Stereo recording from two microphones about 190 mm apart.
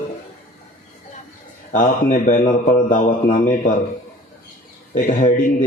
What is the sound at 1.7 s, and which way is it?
A man's voice, 40° left (ahead or behind).